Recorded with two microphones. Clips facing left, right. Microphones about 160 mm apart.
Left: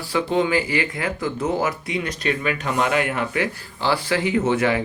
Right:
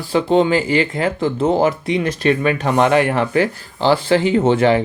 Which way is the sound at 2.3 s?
55° right (ahead or behind).